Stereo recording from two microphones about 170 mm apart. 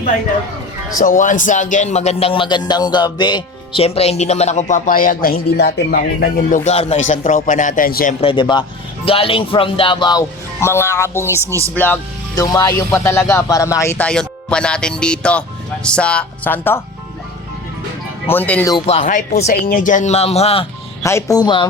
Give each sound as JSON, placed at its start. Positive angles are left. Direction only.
{"t": 0.9, "sound": "a man's voice", "side_deg": 50}
{"t": 6.7, "sound": "speech", "side_deg": 40}
{"t": 8.2, "sound": "speech", "side_deg": 30}
{"t": 12.3, "sound": "speech", "side_deg": 20}
{"t": 18.3, "sound": "speech", "side_deg": 10}
{"t": 18.9, "sound": "a man's voice", "side_deg": 45}
{"t": 19.6, "sound": "a man's voice", "side_deg": 50}
{"t": 21.0, "sound": "speech", "side_deg": 15}